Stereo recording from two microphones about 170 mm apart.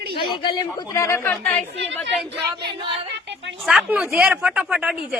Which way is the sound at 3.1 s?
90° right.